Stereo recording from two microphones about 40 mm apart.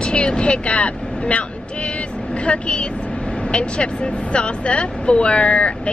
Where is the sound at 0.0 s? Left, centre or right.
Left.